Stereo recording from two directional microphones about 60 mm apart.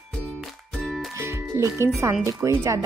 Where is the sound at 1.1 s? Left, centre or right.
Right.